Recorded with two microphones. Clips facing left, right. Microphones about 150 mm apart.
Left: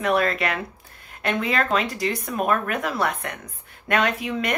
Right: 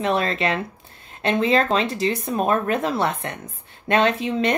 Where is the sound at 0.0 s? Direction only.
25° right (ahead or behind).